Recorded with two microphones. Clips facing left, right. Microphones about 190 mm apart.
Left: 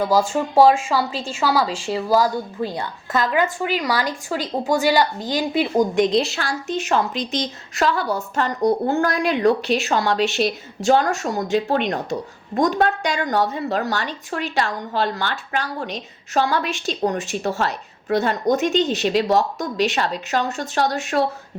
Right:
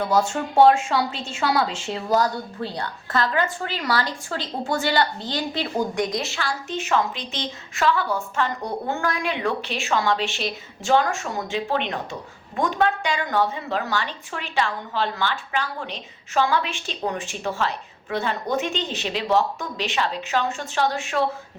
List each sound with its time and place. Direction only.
0.2 s a woman's voice: 5° left (ahead or behind)
6.3 s a woman's voice: 40° left (ahead or behind)